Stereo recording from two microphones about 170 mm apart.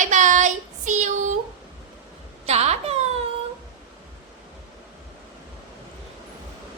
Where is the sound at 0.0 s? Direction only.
45° right (ahead or behind).